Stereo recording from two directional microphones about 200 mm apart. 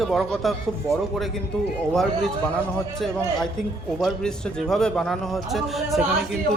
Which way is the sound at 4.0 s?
Centre (ahead or behind).